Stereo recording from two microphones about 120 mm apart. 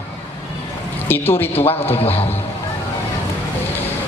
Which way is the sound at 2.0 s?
55° left (ahead or behind).